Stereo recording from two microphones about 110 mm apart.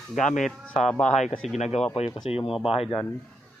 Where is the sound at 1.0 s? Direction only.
90° left.